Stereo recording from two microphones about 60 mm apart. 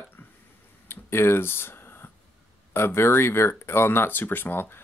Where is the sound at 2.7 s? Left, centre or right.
Left.